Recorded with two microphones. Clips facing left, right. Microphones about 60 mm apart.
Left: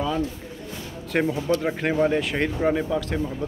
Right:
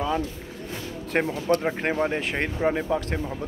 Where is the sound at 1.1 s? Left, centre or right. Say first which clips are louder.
Left 1 dB; right.